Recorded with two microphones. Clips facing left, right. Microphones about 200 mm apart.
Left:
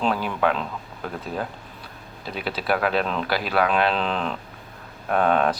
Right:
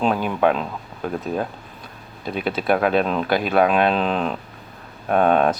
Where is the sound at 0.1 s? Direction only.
20° right (ahead or behind).